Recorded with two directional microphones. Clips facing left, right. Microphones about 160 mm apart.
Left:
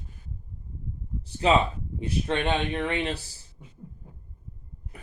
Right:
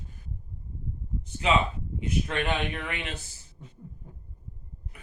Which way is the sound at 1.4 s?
35° left (ahead or behind).